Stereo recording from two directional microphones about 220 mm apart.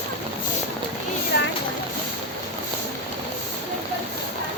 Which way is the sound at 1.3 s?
45° left (ahead or behind).